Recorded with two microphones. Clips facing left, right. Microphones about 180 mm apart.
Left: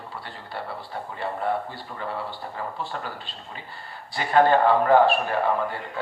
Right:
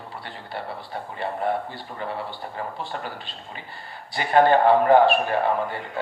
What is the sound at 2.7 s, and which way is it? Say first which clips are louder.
A man's voice: even; 15° right (ahead or behind).